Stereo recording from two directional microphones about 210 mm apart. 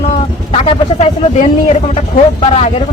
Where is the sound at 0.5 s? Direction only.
30° left (ahead or behind).